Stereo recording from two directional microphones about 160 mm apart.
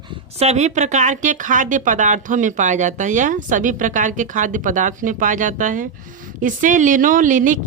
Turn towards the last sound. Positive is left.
turn(degrees=-55)  # may be behind; listen again after turning